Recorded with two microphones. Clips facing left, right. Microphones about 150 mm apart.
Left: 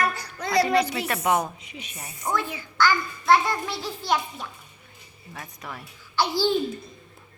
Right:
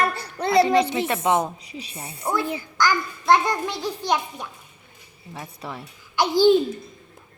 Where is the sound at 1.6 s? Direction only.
35° right (ahead or behind).